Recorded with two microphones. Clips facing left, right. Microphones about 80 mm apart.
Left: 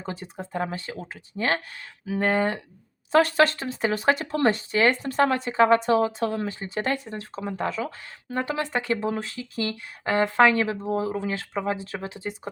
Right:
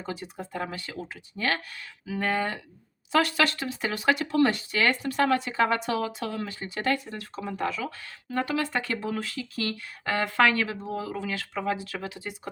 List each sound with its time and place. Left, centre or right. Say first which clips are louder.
0.0 s speech: left 1 dB; left